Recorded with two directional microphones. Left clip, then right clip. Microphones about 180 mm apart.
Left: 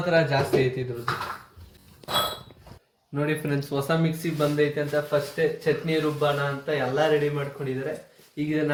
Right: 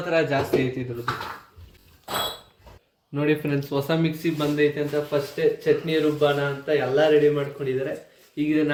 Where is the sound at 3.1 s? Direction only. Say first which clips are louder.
Right 3 dB; 20° right (ahead or behind).